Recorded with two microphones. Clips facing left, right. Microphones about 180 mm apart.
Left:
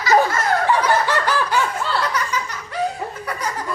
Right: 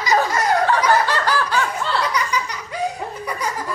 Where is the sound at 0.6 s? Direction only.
15° left (ahead or behind).